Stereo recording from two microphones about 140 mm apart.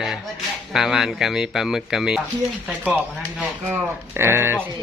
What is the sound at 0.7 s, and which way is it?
Speech, centre (ahead or behind).